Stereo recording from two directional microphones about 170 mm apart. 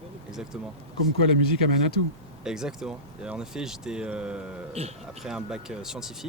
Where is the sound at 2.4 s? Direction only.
5° right (ahead or behind).